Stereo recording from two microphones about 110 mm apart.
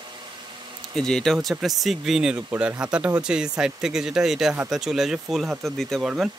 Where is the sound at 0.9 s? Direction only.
5° left (ahead or behind).